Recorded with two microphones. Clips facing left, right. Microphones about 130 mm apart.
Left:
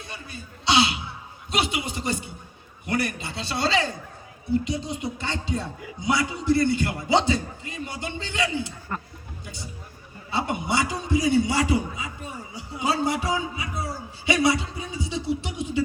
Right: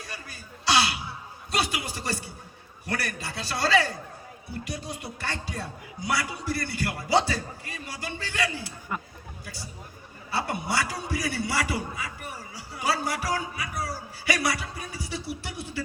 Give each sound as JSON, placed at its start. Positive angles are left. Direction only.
{"t": 0.0, "sound": "a sound", "side_deg": 25}
{"t": 1.5, "sound": "a man's voice", "side_deg": 20}
{"t": 8.9, "sound": "speech", "side_deg": -10}
{"t": 10.3, "sound": "a man's voice", "side_deg": 20}